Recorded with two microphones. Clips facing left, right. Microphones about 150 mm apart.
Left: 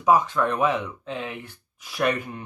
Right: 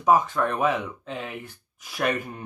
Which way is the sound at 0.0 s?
45° right (ahead or behind).